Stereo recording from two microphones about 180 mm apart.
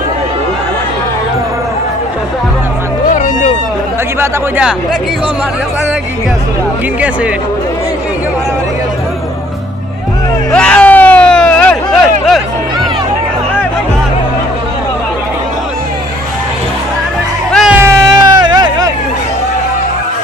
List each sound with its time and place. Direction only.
3.1 s music: 45° left (ahead or behind)
4.2 s speech: 10° right (ahead or behind)
10.5 s a sound: 5° left (ahead or behind)
17.5 s music: centre (ahead or behind)
17.7 s music: 15° right (ahead or behind)